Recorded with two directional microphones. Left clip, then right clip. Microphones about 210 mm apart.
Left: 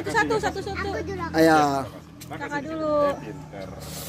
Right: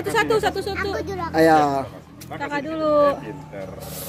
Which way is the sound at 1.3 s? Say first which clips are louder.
Right 2 dB; 5° left (ahead or behind).